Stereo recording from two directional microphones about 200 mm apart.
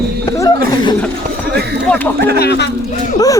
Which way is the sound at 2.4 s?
55° left (ahead or behind).